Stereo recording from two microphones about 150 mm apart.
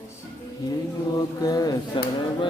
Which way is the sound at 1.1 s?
25° left (ahead or behind).